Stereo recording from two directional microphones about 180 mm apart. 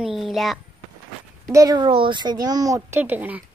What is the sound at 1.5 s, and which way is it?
Speech, 20° right (ahead or behind).